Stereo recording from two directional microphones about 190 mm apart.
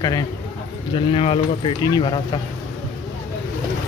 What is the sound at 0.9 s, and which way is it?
Speech, 30° left (ahead or behind).